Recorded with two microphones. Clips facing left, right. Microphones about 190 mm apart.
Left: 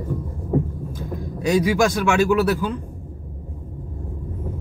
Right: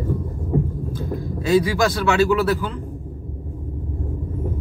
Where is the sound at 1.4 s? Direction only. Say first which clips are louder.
Even; 15° left (ahead or behind).